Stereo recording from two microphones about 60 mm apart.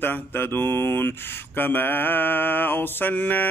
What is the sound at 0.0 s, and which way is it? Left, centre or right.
Mantra, left.